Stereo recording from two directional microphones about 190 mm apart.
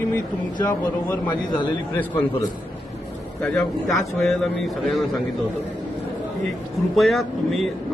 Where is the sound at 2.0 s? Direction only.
10° left (ahead or behind).